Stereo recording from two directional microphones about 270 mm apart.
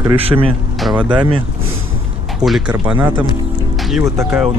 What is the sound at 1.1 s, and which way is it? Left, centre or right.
Speech, centre.